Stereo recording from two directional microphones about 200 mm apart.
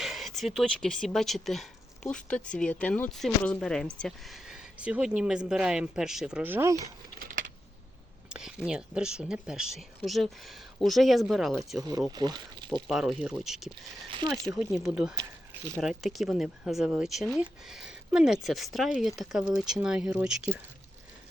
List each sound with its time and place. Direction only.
0.0 s speech: centre (ahead or behind)
8.3 s speech: 5° right (ahead or behind)
11.8 s speech: 20° right (ahead or behind)
12.9 s speech: centre (ahead or behind)
15.1 s a sound: 15° right (ahead or behind)
15.8 s speech: centre (ahead or behind)